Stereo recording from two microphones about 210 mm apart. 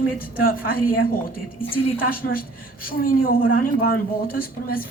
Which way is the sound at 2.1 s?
45° left (ahead or behind).